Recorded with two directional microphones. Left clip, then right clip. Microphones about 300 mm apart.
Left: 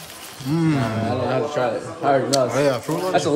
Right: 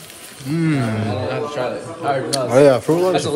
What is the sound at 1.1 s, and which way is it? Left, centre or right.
Speech, left.